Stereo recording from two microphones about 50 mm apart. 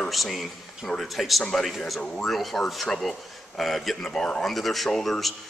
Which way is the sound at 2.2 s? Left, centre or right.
Centre.